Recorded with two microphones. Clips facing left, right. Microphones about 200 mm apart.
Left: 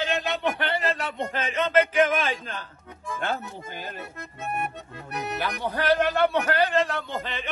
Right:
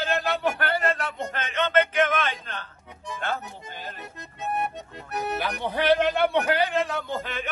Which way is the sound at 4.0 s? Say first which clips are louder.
Even; 20° right (ahead or behind).